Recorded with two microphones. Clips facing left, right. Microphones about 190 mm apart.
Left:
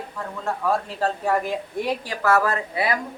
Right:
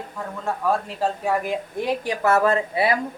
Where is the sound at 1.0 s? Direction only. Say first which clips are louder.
Even; 10° right (ahead or behind).